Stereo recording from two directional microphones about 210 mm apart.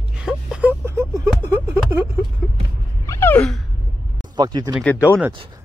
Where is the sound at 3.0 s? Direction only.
10° left (ahead or behind).